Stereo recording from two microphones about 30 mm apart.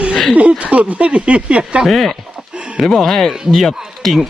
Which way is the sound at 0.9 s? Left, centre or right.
Right.